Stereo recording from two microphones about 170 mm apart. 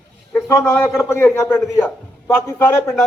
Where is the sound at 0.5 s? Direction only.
15° left (ahead or behind).